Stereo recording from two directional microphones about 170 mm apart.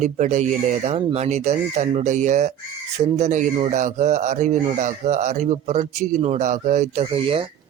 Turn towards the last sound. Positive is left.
turn(degrees=-35)  # may be behind; listen again after turning